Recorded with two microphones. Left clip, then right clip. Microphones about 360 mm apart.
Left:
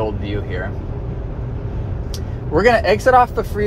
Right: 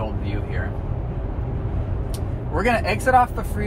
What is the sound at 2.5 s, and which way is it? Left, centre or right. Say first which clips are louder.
Speech: left 8 dB; left.